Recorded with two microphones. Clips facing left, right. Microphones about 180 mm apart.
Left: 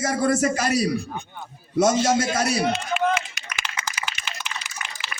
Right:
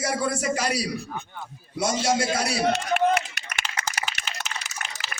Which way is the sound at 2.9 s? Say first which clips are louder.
Right 1 dB; 65° right (ahead or behind).